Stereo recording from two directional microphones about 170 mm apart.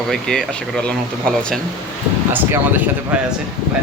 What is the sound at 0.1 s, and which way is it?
Speech, 5° left (ahead or behind).